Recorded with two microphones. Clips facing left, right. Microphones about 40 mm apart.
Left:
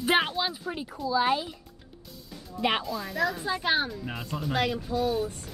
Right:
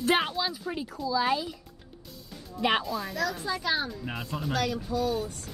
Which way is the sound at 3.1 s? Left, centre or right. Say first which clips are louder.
Left 5 dB; left.